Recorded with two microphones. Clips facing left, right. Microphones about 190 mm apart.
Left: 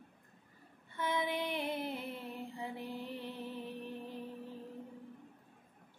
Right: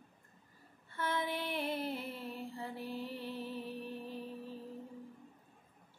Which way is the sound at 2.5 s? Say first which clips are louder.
Even; 20° left (ahead or behind).